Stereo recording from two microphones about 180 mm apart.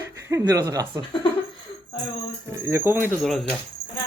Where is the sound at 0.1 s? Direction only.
15° right (ahead or behind).